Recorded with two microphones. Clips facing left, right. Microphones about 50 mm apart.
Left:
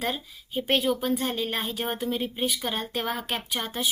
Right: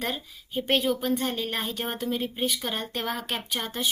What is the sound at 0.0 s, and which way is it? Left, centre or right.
A woman's voice, centre.